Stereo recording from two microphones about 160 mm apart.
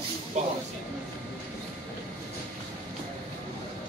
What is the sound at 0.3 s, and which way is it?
Speech, 45° right (ahead or behind).